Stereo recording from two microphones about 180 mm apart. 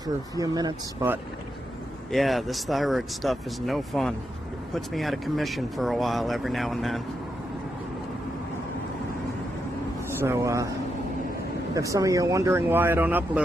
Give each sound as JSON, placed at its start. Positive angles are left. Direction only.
{"t": 0.3, "sound": "speech", "side_deg": -20}
{"t": 2.0, "sound": "speech", "side_deg": 0}
{"t": 10.1, "sound": "speech", "side_deg": -15}
{"t": 11.7, "sound": "speech", "side_deg": -20}